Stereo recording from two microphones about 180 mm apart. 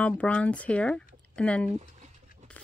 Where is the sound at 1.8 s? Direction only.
40° right (ahead or behind).